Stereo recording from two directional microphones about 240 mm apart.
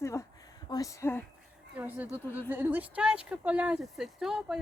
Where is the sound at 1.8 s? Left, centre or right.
Centre.